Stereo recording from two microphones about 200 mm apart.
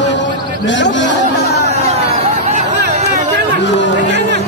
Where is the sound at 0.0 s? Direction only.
60° left (ahead or behind).